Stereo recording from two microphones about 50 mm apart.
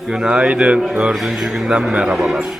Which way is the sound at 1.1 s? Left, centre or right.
Centre.